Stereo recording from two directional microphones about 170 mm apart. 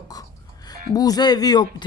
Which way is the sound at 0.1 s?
20° left (ahead or behind).